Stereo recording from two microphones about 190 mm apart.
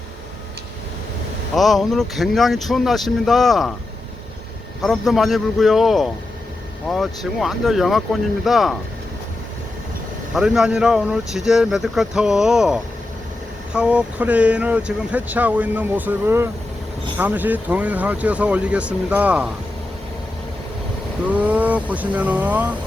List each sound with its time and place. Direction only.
1.5 s speech: centre (ahead or behind)
4.8 s speech: centre (ahead or behind)
10.3 s speech: 5° right (ahead or behind)
21.2 s speech: 5° right (ahead or behind)